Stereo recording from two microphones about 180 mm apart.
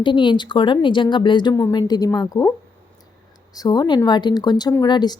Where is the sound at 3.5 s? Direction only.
20° left (ahead or behind).